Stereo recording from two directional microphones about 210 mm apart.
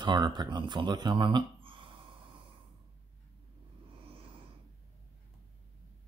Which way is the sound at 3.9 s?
25° right (ahead or behind).